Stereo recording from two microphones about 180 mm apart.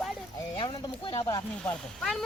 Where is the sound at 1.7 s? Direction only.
5° left (ahead or behind).